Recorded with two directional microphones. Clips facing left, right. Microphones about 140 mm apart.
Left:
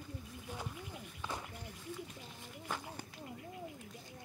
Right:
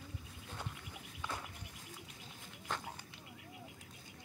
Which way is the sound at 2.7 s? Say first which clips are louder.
Even; 5° left (ahead or behind).